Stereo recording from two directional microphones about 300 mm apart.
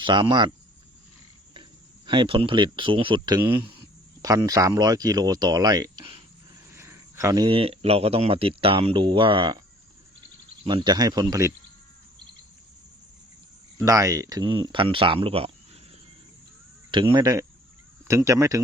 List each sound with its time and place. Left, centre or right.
0.0 s speech: centre
2.0 s speech: centre
13.8 s speech: centre
16.9 s speech: centre